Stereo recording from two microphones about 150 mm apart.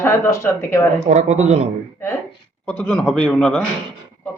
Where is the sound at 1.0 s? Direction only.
50° right (ahead or behind).